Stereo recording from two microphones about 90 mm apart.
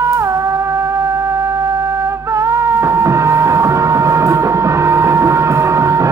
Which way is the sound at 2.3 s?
35° right (ahead or behind).